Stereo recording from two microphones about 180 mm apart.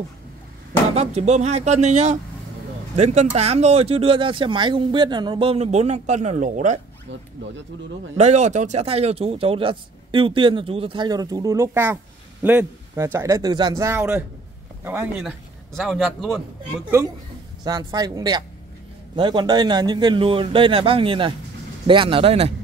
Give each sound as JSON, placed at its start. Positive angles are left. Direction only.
{"t": 0.9, "sound": "speech", "side_deg": -40}
{"t": 8.2, "sound": "a man's voice", "side_deg": -40}
{"t": 17.6, "sound": "speech", "side_deg": -20}